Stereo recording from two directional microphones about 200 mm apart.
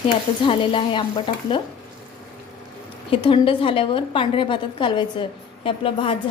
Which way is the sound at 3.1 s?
25° left (ahead or behind).